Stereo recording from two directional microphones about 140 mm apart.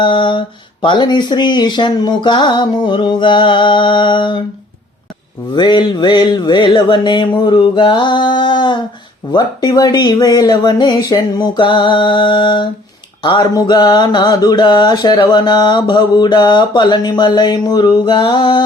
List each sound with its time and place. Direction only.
0.0 s mantra: 35° left (ahead or behind)
5.5 s mantra: 35° left (ahead or behind)